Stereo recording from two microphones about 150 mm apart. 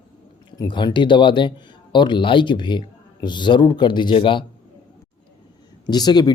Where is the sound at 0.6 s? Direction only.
30° left (ahead or behind).